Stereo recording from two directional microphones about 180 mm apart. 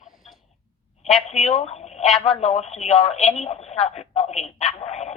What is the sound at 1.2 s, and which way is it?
Speech, 35° left (ahead or behind).